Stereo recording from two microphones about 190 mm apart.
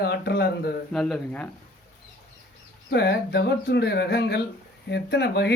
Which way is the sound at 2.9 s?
60° left (ahead or behind).